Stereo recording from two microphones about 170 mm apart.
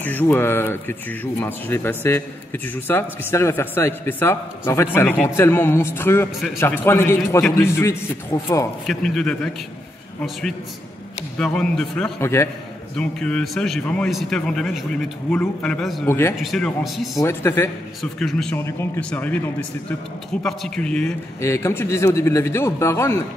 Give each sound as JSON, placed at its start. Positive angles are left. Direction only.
{"t": 0.0, "sound": "speech", "side_deg": 10}
{"t": 8.8, "sound": "a man's voice", "side_deg": 0}
{"t": 11.3, "sound": "a man's voice", "side_deg": 5}
{"t": 16.1, "sound": "speech", "side_deg": 15}
{"t": 16.3, "sound": "a man's voice", "side_deg": 0}
{"t": 17.2, "sound": "speech", "side_deg": 15}
{"t": 18.2, "sound": "a man's voice", "side_deg": 5}
{"t": 18.6, "sound": "a man's voice", "side_deg": 15}
{"t": 21.4, "sound": "speech", "side_deg": 15}